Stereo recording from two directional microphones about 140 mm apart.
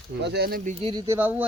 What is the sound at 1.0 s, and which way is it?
Speech, 15° right (ahead or behind).